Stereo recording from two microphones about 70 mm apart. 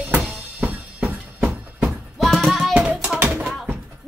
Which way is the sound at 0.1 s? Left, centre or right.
Right.